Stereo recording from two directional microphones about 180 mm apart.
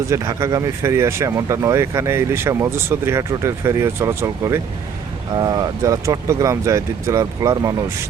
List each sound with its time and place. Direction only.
0.1 s speech: 15° right (ahead or behind)